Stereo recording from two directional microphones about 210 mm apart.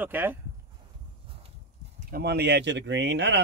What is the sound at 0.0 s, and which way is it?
Speech, 10° right (ahead or behind).